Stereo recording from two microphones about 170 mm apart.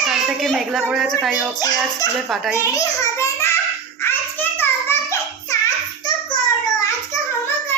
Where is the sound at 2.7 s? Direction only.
20° left (ahead or behind).